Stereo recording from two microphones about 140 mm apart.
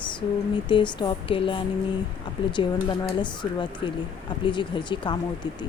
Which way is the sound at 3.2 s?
35° left (ahead or behind).